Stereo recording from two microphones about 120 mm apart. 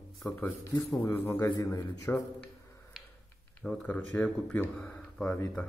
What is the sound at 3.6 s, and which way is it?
Speech, 10° left (ahead or behind).